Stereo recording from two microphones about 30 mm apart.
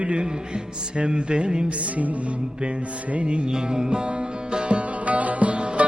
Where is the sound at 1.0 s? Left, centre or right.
Right.